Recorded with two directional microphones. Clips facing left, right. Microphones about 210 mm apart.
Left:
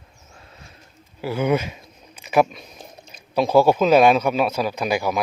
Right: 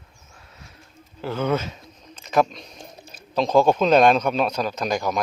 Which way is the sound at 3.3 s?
10° left (ahead or behind).